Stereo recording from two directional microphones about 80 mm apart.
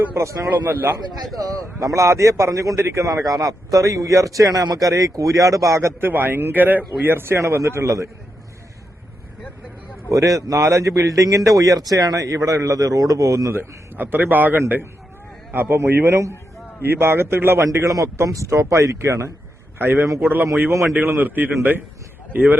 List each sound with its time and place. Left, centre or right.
0.0 s speech: right
0.5 s a man's voice: right
1.6 s a man's voice: right
6.1 s a man's voice: right
10.1 s a man's voice: right
17.6 s a man's voice: right